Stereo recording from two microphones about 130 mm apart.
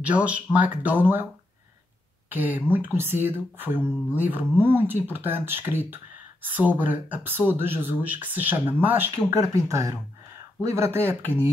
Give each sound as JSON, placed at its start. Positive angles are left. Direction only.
{"t": 0.0, "sound": "speech", "side_deg": -10}